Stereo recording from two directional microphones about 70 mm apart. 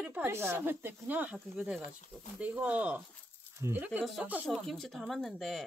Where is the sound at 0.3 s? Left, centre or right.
Right.